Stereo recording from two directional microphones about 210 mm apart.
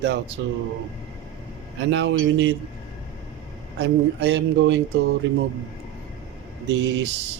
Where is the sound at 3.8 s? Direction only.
55° right (ahead or behind).